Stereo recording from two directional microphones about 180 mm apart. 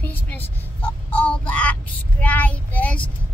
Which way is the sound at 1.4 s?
5° left (ahead or behind).